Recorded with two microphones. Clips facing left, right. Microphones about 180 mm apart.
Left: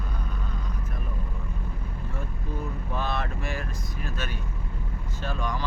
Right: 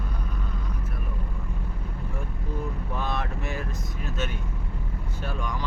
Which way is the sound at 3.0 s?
15° right (ahead or behind).